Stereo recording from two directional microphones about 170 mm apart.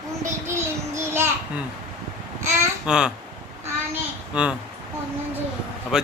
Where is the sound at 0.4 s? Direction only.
15° right (ahead or behind).